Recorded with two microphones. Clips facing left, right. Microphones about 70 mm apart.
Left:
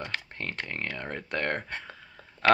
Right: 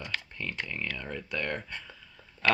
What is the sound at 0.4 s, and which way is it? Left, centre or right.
Speech, left.